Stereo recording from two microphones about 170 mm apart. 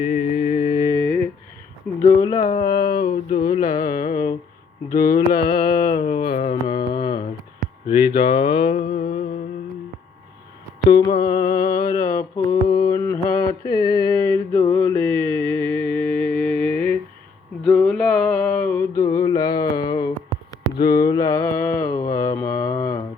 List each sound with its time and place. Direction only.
0.0 s mantra: 50° left (ahead or behind)
0.5 s mantra: 40° left (ahead or behind)
1.9 s a sound: 10° left (ahead or behind)
2.4 s a sound: 45° left (ahead or behind)
2.7 s a sound: 65° left (ahead or behind)
3.6 s carnatic music: 60° left (ahead or behind)
4.9 s mantra: 60° left (ahead or behind)
6.5 s mantra: 25° left (ahead or behind)
10.8 s mantra: 25° left (ahead or behind)
12.6 s mantra: 30° left (ahead or behind)
13.0 s mantra: 15° left (ahead or behind)
17.7 s a sound: 5° left (ahead or behind); by 20.1 s 25° left (ahead or behind)
20.7 s mantra: 25° left (ahead or behind)